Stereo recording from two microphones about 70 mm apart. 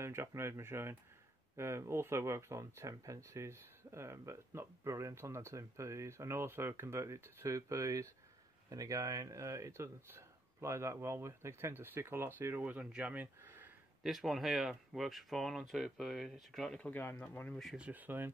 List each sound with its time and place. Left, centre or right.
0.0 s speech: right
14.0 s speech: centre
16.8 s speech: left
17.7 s speech: right